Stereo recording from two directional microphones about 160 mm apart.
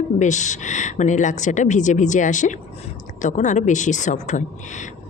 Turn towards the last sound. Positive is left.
turn(degrees=50)  # may be behind; listen again after turning